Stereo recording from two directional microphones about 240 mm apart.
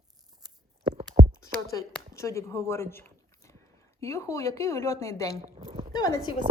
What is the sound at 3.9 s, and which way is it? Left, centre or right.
Speech, centre.